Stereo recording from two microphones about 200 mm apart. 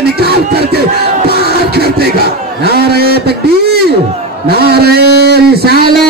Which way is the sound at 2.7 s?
50° right (ahead or behind).